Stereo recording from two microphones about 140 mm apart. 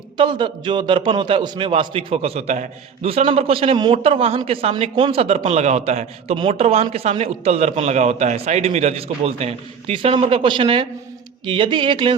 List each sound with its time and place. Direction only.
0.2 s a man's voice: 35° right (ahead or behind)